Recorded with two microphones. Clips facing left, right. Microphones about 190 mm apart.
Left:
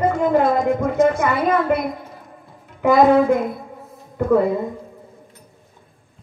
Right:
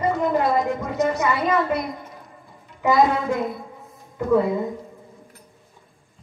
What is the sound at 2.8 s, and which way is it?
Speech, 55° left (ahead or behind).